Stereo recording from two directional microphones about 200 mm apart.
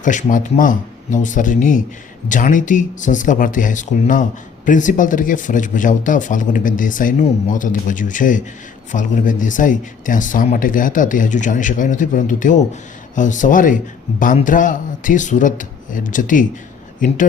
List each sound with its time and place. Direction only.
0.0 s speech: 40° left (ahead or behind)